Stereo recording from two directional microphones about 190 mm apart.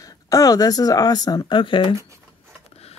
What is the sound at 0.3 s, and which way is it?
Speech, 20° left (ahead or behind).